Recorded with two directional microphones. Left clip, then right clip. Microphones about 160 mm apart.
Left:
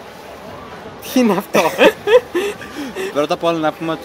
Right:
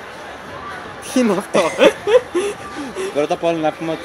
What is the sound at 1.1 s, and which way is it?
Speech, 25° left (ahead or behind).